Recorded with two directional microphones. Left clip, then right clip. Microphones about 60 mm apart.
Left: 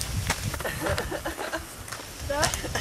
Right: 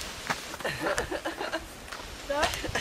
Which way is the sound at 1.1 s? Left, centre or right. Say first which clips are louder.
Left 1 dB; centre.